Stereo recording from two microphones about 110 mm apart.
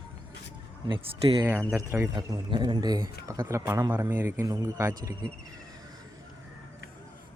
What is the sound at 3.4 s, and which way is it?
Speech, 20° right (ahead or behind).